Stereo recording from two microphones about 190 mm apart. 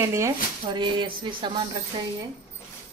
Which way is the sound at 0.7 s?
25° right (ahead or behind).